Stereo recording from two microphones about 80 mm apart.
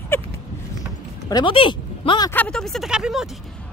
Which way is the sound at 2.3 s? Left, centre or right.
Centre.